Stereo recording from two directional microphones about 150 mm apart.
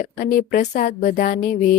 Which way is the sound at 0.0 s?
70° left (ahead or behind).